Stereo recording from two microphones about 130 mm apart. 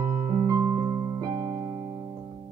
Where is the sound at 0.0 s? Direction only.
30° right (ahead or behind).